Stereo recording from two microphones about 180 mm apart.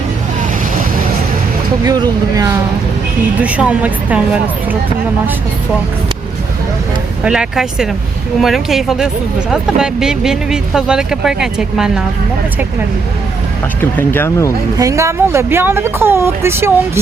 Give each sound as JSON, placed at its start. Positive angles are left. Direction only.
{"t": 1.8, "sound": "speech", "side_deg": -20}
{"t": 3.4, "sound": "speech", "side_deg": -10}
{"t": 7.3, "sound": "speech", "side_deg": -5}
{"t": 13.9, "sound": "speech", "side_deg": 10}
{"t": 14.8, "sound": "speech", "side_deg": -15}